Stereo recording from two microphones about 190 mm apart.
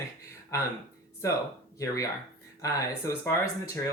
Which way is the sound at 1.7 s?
15° left (ahead or behind).